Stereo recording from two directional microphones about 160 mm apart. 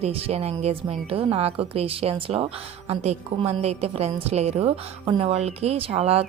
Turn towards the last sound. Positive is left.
turn(degrees=-40)  # may be behind; listen again after turning